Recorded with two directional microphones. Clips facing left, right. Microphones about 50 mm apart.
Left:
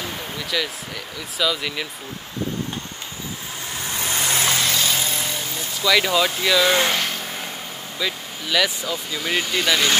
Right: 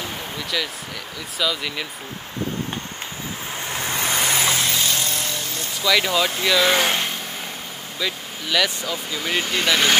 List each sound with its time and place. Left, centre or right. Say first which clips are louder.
0.0 s a sound: even; centre
1.4 s speech: left 1 dB; centre
3.7 s vehicle: right 3 dB; right
4.1 s vehicle: even; centre
4.6 s vehicle: left 1 dB; centre
6.4 s speech: right 1 dB; centre
8.0 s speech: even; centre